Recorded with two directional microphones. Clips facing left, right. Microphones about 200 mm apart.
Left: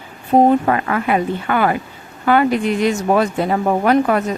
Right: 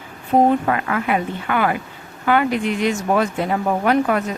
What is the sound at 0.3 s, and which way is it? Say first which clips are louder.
A woman's voice: left 3 dB; 35° left (ahead or behind).